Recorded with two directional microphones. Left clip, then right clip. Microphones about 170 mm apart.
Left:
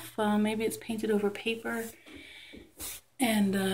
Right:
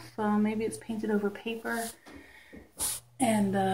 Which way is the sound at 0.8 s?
5° left (ahead or behind).